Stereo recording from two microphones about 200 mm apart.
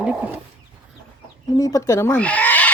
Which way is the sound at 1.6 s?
15° left (ahead or behind).